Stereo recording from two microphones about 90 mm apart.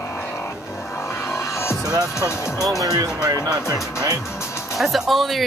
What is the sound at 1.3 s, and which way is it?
Music, 30° left (ahead or behind).